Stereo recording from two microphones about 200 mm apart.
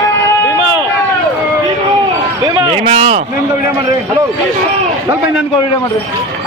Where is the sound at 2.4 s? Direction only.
20° right (ahead or behind).